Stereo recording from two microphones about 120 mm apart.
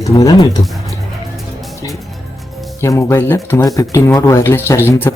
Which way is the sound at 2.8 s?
25° left (ahead or behind).